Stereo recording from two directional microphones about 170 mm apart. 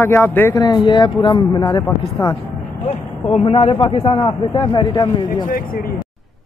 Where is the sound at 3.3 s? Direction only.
35° left (ahead or behind).